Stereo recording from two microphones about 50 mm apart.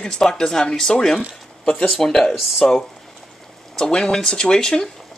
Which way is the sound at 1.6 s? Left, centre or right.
Centre.